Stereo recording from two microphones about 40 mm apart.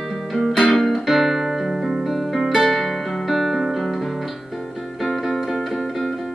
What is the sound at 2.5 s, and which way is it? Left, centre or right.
Guitar, centre.